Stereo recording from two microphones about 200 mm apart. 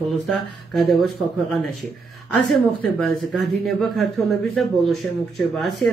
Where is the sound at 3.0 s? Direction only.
Centre (ahead or behind).